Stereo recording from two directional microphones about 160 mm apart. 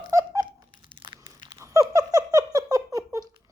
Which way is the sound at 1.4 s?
20° right (ahead or behind).